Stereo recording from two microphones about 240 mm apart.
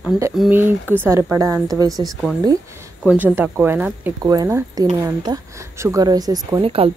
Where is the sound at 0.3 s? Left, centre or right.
Centre.